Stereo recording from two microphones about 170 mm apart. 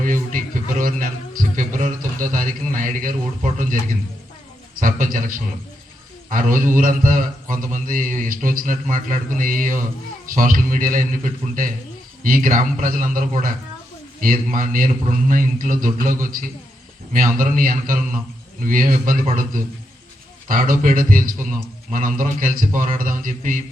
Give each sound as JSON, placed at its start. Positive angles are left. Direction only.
{"t": 0.0, "sound": "a sound", "side_deg": -50}
{"t": 4.8, "sound": "a man's voice", "side_deg": -55}
{"t": 20.5, "sound": "a man's voice", "side_deg": -55}